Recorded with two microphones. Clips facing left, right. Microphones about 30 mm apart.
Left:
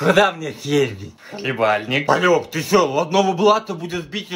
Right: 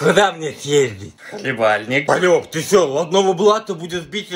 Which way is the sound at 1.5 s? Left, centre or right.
Centre.